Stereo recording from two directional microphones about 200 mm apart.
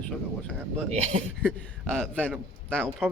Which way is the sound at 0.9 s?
30° right (ahead or behind).